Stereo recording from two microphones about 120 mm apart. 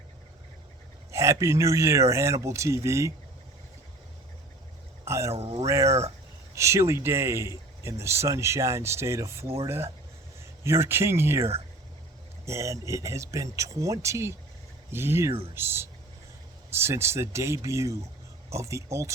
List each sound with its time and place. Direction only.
1.1 s speech: 25° right (ahead or behind)
5.0 s speech: 25° right (ahead or behind)
5.3 s speech: 55° right (ahead or behind)
5.6 s speech: 25° right (ahead or behind)
5.9 s speech: 60° right (ahead or behind)
6.5 s speech: 25° right (ahead or behind)